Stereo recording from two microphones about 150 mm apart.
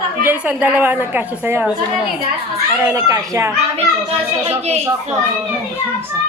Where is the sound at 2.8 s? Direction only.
20° right (ahead or behind).